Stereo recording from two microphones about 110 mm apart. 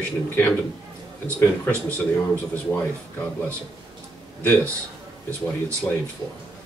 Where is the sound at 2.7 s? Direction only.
10° left (ahead or behind).